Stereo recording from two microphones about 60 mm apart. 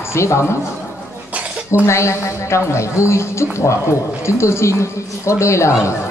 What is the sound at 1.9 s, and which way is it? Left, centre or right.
A woman's voice, left.